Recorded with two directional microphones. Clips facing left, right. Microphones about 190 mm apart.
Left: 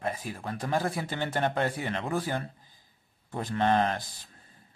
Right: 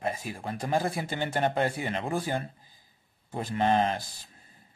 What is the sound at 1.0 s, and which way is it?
Speech, 15° right (ahead or behind).